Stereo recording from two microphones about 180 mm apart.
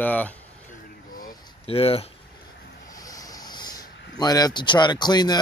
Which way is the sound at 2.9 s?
20° left (ahead or behind).